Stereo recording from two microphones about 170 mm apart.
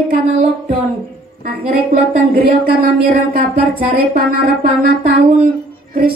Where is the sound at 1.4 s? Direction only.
60° right (ahead or behind).